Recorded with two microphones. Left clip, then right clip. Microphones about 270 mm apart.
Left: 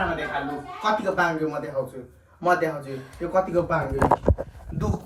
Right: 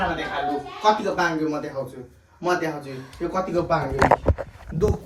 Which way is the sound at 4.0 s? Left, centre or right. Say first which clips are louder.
Right 3 dB; left.